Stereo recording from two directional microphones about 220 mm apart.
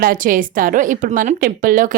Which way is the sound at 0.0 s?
40° right (ahead or behind).